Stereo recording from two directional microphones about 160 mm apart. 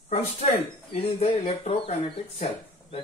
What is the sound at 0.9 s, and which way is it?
Speech, 40° left (ahead or behind).